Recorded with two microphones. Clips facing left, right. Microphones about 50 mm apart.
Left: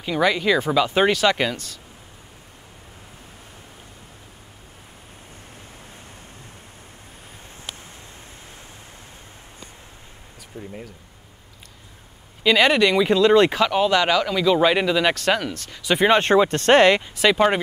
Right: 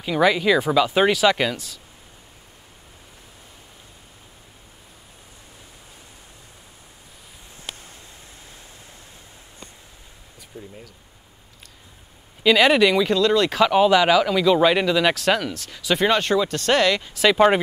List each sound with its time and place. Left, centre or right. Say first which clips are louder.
0.0 s speech: right 2 dB; centre
10.5 s speech: left 2 dB; left
12.4 s speech: right 1 dB; centre
13.0 s speech: left 2 dB; centre
13.6 s speech: right 3 dB; centre
16.1 s speech: left 6 dB; left
17.0 s speech: right 1 dB; centre